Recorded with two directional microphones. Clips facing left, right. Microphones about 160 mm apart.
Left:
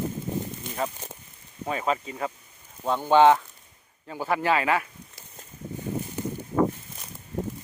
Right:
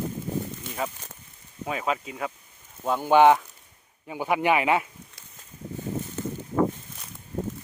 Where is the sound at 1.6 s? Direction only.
5° right (ahead or behind); by 4.8 s 20° right (ahead or behind).